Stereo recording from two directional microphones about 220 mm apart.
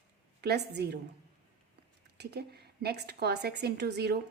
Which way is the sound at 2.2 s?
45° right (ahead or behind).